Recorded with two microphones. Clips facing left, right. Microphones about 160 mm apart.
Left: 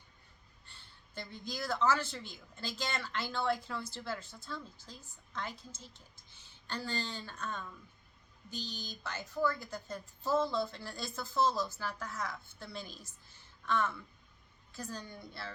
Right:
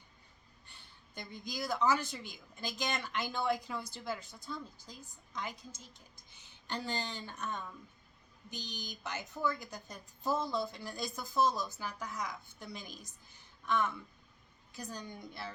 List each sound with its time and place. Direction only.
0.7 s speech: 15° right (ahead or behind)